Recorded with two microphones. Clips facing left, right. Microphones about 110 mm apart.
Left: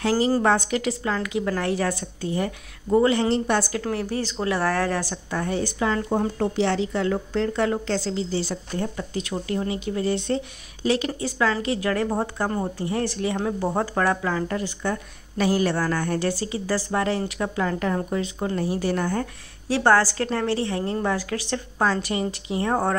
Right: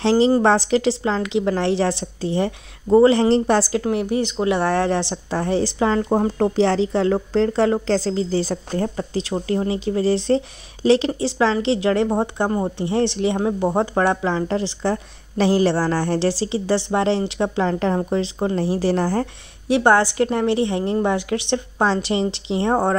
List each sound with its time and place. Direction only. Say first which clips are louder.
0.0 s a woman's voice: right 5 dB; 25° right (ahead or behind)
3.8 s a woman's voice: right 6 dB; 20° right (ahead or behind); by 19.2 s 35° right (ahead or behind)
19.7 s a woman's voice: right 3 dB; 20° right (ahead or behind)